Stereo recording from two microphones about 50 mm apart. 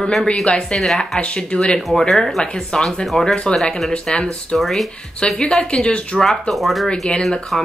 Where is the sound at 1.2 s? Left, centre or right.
Left.